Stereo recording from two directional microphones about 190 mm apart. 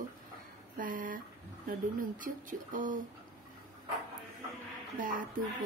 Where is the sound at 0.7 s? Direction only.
45° right (ahead or behind).